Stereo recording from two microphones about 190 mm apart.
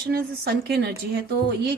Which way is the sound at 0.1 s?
60° right (ahead or behind).